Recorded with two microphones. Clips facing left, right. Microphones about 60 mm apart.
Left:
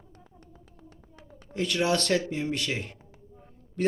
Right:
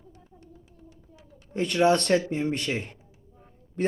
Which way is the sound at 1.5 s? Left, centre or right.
Right.